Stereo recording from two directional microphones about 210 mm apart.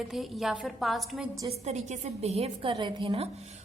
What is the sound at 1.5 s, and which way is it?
A woman's voice, 30° right (ahead or behind).